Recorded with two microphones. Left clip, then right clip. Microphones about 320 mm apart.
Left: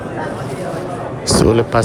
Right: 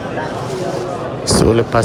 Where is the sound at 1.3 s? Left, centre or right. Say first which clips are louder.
Even; centre.